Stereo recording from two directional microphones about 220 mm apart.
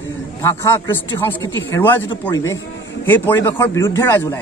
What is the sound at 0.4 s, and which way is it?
A man's voice, 10° left (ahead or behind).